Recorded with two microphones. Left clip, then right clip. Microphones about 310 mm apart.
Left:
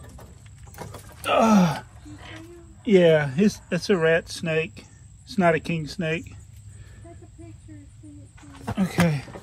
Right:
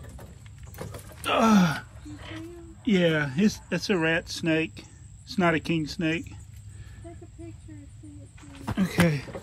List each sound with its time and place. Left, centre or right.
1.2 s gasp: centre
2.8 s speech: centre
8.7 s speech: centre